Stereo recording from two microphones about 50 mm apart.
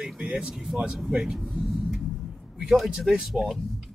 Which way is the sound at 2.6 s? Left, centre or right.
Centre.